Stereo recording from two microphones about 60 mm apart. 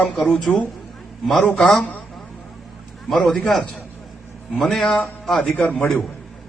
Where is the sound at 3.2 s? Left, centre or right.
Centre.